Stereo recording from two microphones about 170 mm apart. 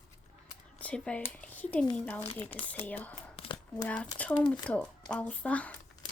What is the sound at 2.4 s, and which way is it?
Speech, 35° left (ahead or behind).